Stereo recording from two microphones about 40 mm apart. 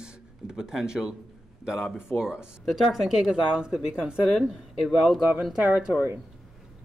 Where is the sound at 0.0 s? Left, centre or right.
Centre.